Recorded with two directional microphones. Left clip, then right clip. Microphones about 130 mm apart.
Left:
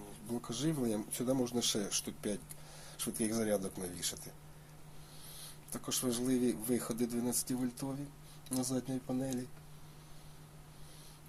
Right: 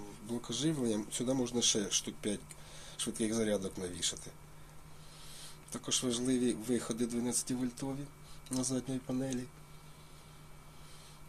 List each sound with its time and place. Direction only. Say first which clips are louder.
0.3 s speech: right 2 dB; 15° right (ahead or behind)
5.4 s speech: right 1 dB; 20° right (ahead or behind)